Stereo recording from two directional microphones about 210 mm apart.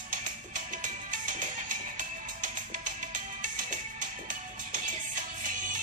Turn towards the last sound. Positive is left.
turn(degrees=-40)  # may be behind; listen again after turning